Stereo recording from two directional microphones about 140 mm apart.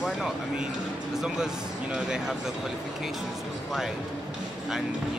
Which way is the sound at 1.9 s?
5° right (ahead or behind).